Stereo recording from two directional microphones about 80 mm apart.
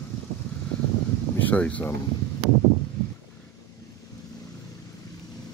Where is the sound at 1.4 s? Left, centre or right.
Centre.